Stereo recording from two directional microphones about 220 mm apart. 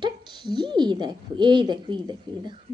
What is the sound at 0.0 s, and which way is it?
A woman's voice, 20° right (ahead or behind).